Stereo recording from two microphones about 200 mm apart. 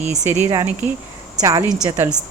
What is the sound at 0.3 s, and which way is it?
A woman's voice, 10° right (ahead or behind).